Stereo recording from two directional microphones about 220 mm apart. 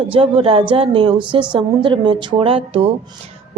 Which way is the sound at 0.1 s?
25° right (ahead or behind).